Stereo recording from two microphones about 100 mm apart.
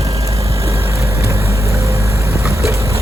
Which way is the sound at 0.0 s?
35° right (ahead or behind).